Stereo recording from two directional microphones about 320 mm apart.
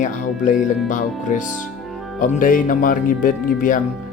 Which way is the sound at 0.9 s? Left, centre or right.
Left.